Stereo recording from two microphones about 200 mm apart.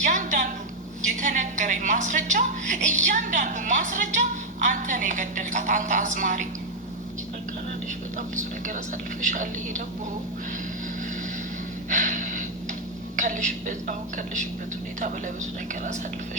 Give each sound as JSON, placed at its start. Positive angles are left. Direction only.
{"t": 0.0, "sound": "a woman's voice", "side_deg": -40}
{"t": 8.4, "sound": "a woman's voice", "side_deg": -40}
{"t": 11.9, "sound": "gasp", "side_deg": -40}
{"t": 13.1, "sound": "a woman's voice", "side_deg": -40}